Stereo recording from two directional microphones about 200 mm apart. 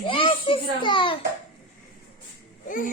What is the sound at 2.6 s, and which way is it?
Speech, 40° left (ahead or behind).